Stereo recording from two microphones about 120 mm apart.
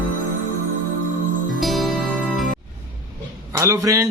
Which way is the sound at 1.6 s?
Centre (ahead or behind).